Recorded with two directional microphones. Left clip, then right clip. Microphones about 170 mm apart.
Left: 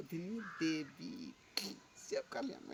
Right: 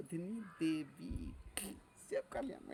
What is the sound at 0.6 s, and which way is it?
Speech, 35° right (ahead or behind).